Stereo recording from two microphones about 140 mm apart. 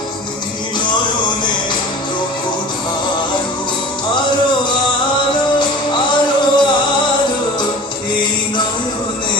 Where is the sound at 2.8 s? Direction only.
35° left (ahead or behind).